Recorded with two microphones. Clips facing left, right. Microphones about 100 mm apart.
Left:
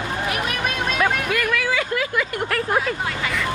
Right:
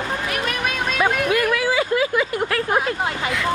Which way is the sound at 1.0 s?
20° right (ahead or behind).